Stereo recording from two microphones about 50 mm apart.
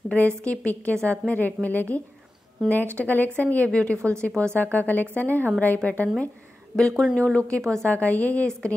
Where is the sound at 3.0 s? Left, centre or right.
Left.